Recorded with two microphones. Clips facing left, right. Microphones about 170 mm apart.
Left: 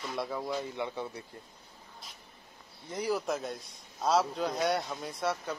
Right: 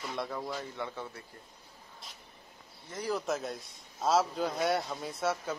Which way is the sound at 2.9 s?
15° left (ahead or behind).